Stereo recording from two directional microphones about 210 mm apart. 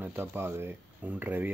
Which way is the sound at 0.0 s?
10° right (ahead or behind).